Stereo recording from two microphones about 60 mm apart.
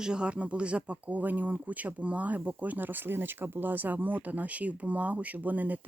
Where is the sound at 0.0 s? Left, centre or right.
Centre.